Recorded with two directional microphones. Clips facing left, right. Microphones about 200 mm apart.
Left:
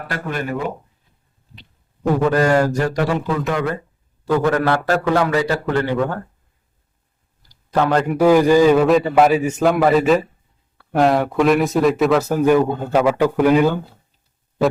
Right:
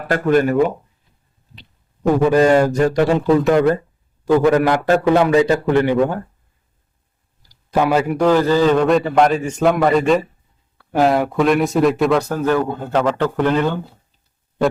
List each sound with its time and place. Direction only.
0.1 s speech: 45° right (ahead or behind)
2.2 s a man's voice: 15° right (ahead or behind); by 3.8 s 30° right (ahead or behind)
4.3 s a man's voice: 15° right (ahead or behind)
7.4 s a sound: 10° right (ahead or behind)
8.2 s a man's voice: 10° left (ahead or behind)
12.4 s speech: 15° left (ahead or behind)